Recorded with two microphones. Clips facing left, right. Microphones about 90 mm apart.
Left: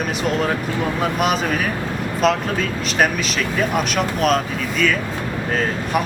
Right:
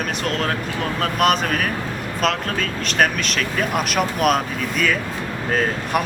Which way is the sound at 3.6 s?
Centre (ahead or behind).